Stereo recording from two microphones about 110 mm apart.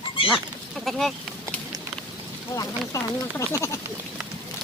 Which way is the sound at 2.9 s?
30° left (ahead or behind).